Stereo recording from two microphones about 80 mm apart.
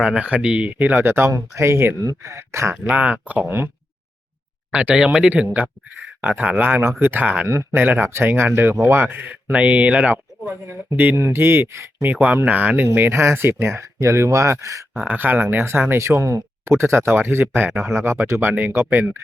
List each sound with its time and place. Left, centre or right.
0.0 s speech: centre
0.7 s speech: right
2.7 s speech: centre
4.7 s speech: centre
6.2 s speech: centre
7.4 s speech: right; by 10.5 s centre
10.7 s speech: right
12.0 s speech: right
15.0 s speech: right